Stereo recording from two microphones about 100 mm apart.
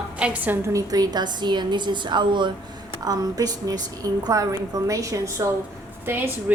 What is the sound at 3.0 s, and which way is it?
A woman's voice, 40° right (ahead or behind).